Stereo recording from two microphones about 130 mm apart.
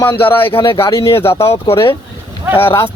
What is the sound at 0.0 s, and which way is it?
Speech, 15° left (ahead or behind).